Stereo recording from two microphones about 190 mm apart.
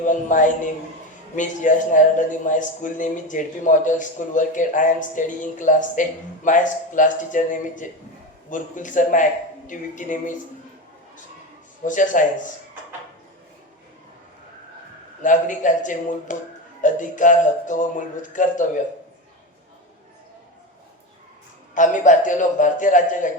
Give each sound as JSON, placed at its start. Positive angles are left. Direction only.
{"t": 0.0, "sound": "a man's voice", "side_deg": 40}
{"t": 11.9, "sound": "a man's voice", "side_deg": 45}
{"t": 15.2, "sound": "a man's voice", "side_deg": 40}
{"t": 21.8, "sound": "a man's voice", "side_deg": 40}